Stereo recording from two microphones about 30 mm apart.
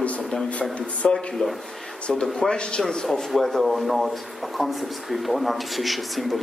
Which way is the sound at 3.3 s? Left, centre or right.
Centre.